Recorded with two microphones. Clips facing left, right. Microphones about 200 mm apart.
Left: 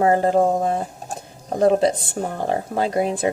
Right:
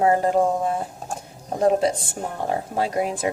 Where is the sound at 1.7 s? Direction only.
35° left (ahead or behind).